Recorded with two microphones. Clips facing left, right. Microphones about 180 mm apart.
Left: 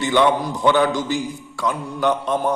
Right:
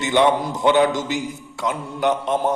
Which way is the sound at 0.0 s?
20° right (ahead or behind).